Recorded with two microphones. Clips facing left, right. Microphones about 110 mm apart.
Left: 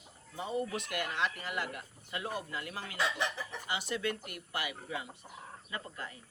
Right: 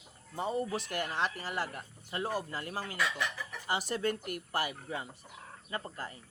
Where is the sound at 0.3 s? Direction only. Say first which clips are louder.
Right 2 dB; 40° right (ahead or behind).